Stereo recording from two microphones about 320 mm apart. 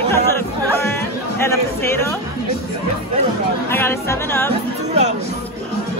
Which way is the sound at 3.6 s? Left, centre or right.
Centre.